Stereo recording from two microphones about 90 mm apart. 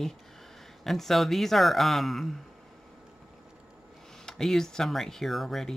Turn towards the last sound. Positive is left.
turn(degrees=0)  # may be behind; listen again after turning